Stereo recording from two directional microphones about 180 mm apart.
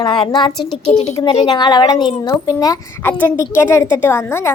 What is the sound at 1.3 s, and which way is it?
A woman's voice, 30° left (ahead or behind).